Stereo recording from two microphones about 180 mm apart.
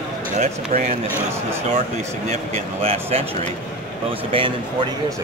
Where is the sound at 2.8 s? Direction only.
35° right (ahead or behind).